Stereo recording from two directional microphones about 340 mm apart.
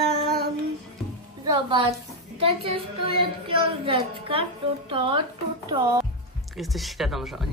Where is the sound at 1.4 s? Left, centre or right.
Centre.